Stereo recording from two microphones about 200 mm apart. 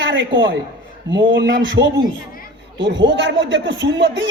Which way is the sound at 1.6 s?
60° right (ahead or behind).